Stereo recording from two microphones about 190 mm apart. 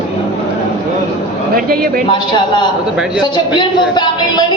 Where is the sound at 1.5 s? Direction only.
50° right (ahead or behind).